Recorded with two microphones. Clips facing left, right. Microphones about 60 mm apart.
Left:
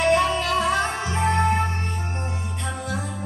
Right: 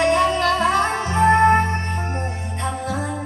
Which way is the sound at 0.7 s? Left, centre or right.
Right.